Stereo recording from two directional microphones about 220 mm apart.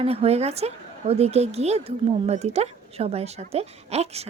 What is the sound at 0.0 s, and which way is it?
A woman's voice, 25° right (ahead or behind).